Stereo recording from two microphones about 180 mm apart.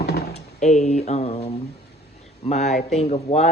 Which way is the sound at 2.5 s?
40° left (ahead or behind).